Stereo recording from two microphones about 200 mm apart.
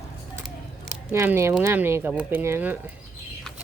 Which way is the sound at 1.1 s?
10° right (ahead or behind).